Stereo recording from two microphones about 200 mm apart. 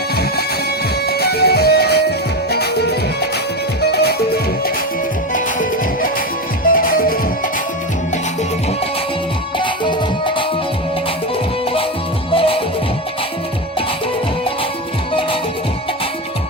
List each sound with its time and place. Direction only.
1.0 s music: 55° left (ahead or behind)
5.3 s music: 40° left (ahead or behind)
9.6 s music: 25° left (ahead or behind)
12.3 s music: 25° left (ahead or behind)